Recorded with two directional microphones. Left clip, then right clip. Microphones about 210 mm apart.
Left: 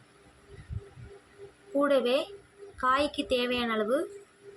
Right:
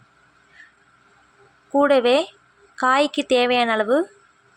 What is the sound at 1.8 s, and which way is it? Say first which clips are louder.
Speech: right 9 dB; 35° right (ahead or behind).